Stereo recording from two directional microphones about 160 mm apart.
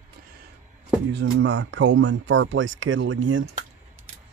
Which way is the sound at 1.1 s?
90° right.